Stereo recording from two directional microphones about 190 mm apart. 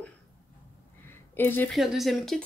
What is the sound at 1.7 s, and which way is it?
Speech, centre (ahead or behind).